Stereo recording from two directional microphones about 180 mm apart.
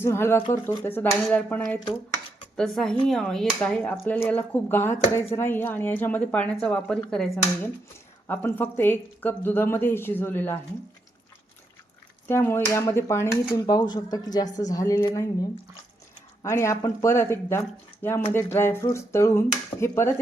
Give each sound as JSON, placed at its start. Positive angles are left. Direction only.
{"t": 0.0, "sound": "speech", "side_deg": 15}
{"t": 12.3, "sound": "speech", "side_deg": 15}
{"t": 16.4, "sound": "speech", "side_deg": 15}